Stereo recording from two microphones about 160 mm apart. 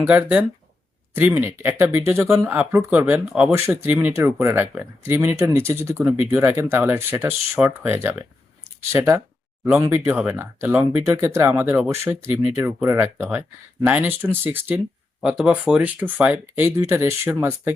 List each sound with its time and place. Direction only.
0.1 s speech: 10° right (ahead or behind)